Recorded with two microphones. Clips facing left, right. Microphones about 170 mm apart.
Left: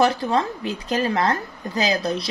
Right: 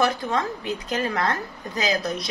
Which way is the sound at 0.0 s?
30° left (ahead or behind).